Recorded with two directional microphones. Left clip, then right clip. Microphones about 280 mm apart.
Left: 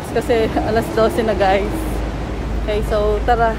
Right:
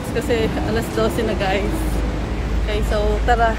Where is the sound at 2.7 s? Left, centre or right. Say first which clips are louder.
Left 4 dB; centre.